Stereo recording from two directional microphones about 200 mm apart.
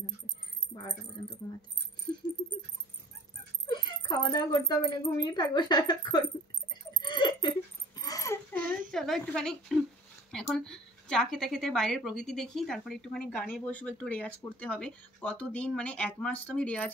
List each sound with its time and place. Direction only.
3.6 s speech: 20° left (ahead or behind)
6.7 s laughter: 20° left (ahead or behind)
8.6 s a woman's voice: centre (ahead or behind)